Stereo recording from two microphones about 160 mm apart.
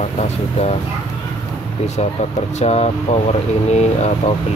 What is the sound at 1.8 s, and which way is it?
Speech, 45° left (ahead or behind).